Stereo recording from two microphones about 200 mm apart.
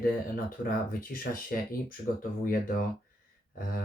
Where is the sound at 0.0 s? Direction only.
45° left (ahead or behind).